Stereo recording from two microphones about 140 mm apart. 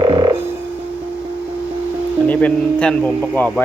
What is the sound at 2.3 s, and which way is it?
Speech, 10° left (ahead or behind).